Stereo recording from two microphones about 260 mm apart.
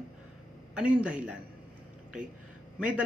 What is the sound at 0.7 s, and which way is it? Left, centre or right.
Speech, centre.